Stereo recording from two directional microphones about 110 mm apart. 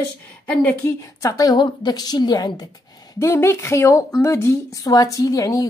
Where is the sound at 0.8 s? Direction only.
30° left (ahead or behind).